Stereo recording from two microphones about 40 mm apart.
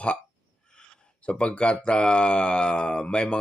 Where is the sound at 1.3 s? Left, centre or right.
Left.